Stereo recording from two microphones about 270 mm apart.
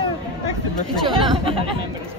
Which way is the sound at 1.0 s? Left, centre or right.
Centre.